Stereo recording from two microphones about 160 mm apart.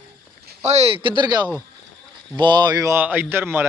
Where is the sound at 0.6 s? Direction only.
45° right (ahead or behind).